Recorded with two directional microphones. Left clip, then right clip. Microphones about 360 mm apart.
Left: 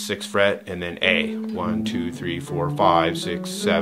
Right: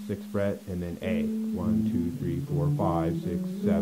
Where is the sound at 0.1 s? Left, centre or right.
Centre.